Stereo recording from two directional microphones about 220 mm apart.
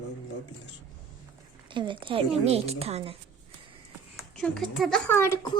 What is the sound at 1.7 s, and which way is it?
A woman's voice, 20° right (ahead or behind).